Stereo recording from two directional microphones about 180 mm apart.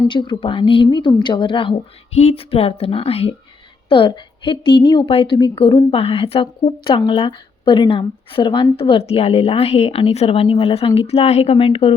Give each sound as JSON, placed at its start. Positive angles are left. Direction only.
{"t": 0.1, "sound": "a woman's voice", "side_deg": 25}